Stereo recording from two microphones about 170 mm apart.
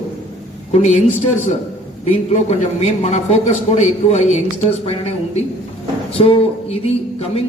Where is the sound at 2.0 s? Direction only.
40° left (ahead or behind).